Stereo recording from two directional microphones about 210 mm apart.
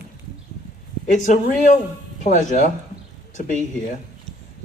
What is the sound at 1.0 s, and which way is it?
Speech, 35° left (ahead or behind).